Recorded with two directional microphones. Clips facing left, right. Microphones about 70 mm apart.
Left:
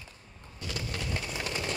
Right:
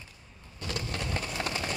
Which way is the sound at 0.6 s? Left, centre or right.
Right.